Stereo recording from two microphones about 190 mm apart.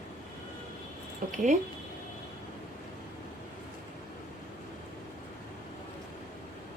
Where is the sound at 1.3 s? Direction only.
40° right (ahead or behind).